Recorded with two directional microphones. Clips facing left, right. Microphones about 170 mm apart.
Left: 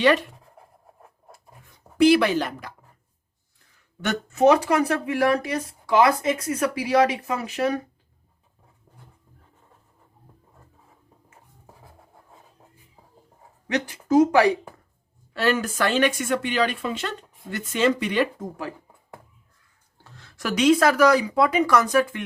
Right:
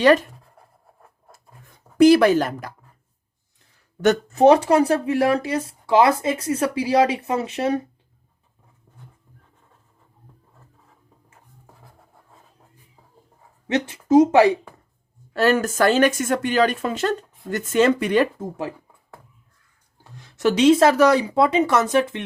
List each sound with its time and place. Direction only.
0.0 s a woman's voice: 40° right (ahead or behind)
2.0 s a woman's voice: 45° right (ahead or behind)
4.0 s speech: 40° right (ahead or behind)
13.7 s speech: 25° right (ahead or behind)
15.3 s a woman's voice: 45° right (ahead or behind)
18.3 s speech: 25° right (ahead or behind)
20.1 s a sound: 15° right (ahead or behind)
20.4 s speech: 25° right (ahead or behind)